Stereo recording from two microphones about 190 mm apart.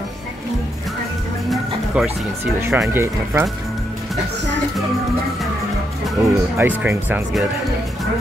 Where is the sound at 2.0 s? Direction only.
5° right (ahead or behind).